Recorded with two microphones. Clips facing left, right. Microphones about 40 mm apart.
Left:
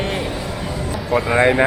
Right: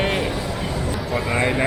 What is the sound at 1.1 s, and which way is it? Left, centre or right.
Speech, centre.